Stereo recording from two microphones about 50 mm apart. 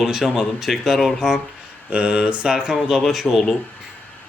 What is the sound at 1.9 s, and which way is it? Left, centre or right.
Speech, right.